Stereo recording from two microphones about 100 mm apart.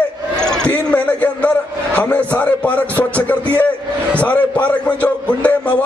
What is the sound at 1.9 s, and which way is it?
A man's voice, 15° left (ahead or behind).